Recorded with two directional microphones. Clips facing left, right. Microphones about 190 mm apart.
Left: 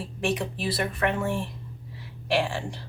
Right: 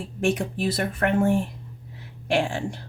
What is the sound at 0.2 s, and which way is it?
Speech, 45° right (ahead or behind).